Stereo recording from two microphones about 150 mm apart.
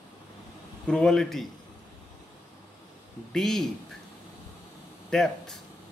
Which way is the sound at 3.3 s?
5° left (ahead or behind).